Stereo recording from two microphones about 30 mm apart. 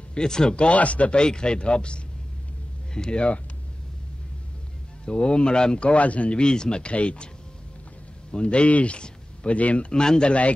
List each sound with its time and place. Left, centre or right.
0.1 s speech: left
0.7 s speech: left
1.1 s speech: left
5.0 s speech: left
5.8 s speech: left
6.3 s speech: left
8.5 s speech: left
9.9 s speech: left